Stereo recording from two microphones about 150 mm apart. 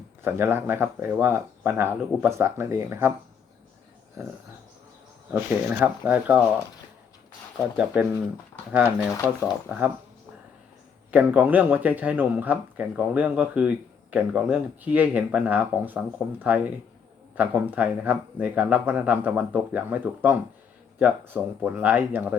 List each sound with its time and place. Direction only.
0.3 s speech: 15° right (ahead or behind)
4.2 s a sound: 20° right (ahead or behind)
5.3 s speech: 10° right (ahead or behind)
8.7 s speech: 10° right (ahead or behind)
11.1 s speech: 10° right (ahead or behind)